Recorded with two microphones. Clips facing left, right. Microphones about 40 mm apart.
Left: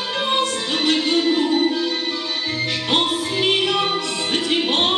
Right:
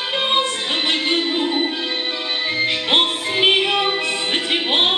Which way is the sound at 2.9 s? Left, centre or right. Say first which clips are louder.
Even; right.